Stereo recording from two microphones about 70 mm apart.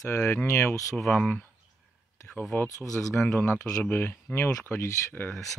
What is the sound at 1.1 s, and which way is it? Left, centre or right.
Speech, left.